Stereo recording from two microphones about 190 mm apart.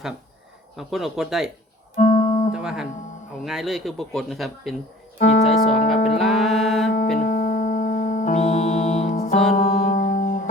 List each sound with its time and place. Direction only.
0.8 s a man's voice: centre (ahead or behind)
2.0 s music: 40° left (ahead or behind)
2.5 s a man's voice: 5° right (ahead or behind)
5.3 s speech: 35° left (ahead or behind)
6.1 s music: centre (ahead or behind)
7.2 s music: 45° left (ahead or behind)
9.6 s music: 50° left (ahead or behind)